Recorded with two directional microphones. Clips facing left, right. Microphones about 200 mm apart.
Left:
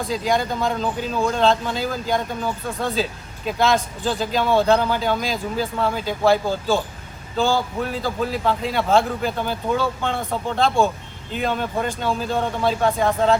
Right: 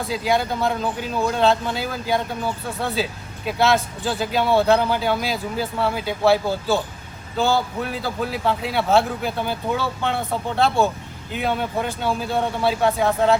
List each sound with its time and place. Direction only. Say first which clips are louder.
0.0 s speech: even; 5° right (ahead or behind)
7.8 s speech: left 2 dB; 10° right (ahead or behind)